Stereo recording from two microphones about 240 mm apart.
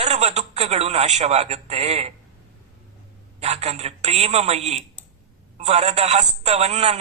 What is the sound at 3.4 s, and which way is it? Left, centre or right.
Speech, right.